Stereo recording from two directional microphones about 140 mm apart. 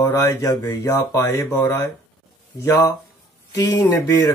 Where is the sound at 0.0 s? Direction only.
20° left (ahead or behind).